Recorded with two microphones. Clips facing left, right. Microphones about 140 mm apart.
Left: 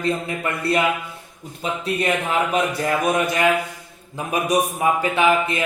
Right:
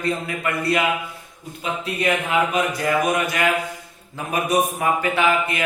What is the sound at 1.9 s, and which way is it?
A man's voice, 35° left (ahead or behind).